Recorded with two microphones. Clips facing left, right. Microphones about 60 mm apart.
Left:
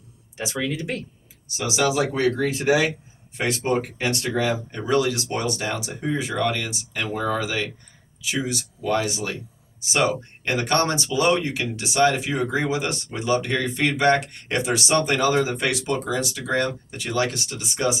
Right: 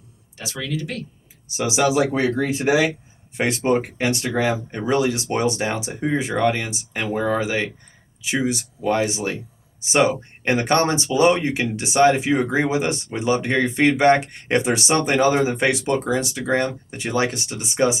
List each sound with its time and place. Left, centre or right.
0.3 s speech: left
1.5 s speech: right